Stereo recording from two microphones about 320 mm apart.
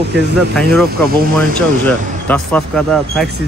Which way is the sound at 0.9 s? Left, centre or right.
Right.